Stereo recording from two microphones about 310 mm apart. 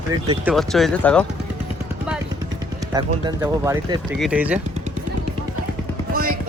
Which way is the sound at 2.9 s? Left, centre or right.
Centre.